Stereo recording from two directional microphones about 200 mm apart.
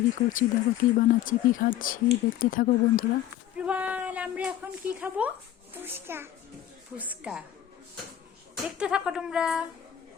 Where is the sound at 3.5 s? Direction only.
5° right (ahead or behind).